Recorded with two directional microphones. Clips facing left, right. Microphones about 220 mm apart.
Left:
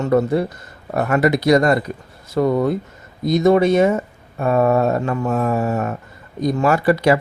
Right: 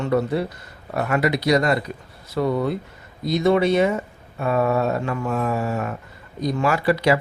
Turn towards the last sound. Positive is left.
turn(degrees=50)  # may be behind; listen again after turning